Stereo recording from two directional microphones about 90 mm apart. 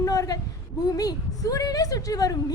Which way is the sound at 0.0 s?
40° left (ahead or behind).